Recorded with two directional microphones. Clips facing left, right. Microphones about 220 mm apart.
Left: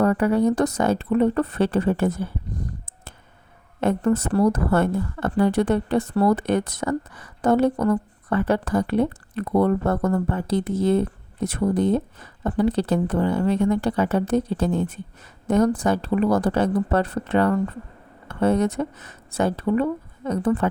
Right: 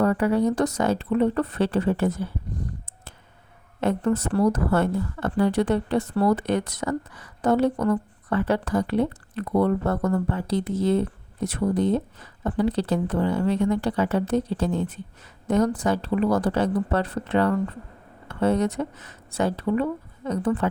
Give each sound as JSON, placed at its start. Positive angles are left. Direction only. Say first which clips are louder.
{"t": 0.0, "sound": "a woman's voice", "louder": "left 2 dB", "side_deg": 50}
{"t": 3.8, "sound": "a woman's voice", "louder": "left 2 dB", "side_deg": 50}